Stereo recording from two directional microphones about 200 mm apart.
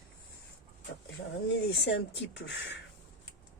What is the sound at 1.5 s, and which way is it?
Speech, 60° left (ahead or behind).